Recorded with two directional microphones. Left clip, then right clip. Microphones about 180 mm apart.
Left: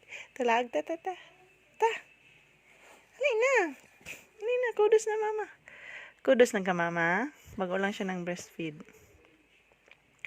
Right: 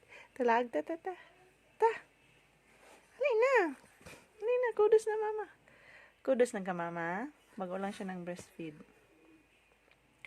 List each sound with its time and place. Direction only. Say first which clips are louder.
0.3 s speech: left 2 dB; 5° right (ahead or behind)
3.2 s a sound: left 2 dB; centre (ahead or behind)
4.4 s speech: left 2 dB; centre (ahead or behind)
5.6 s speech: left 12 dB; 30° left (ahead or behind)